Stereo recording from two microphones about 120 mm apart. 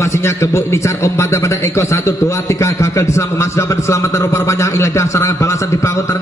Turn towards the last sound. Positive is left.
turn(degrees=25)  # may be behind; listen again after turning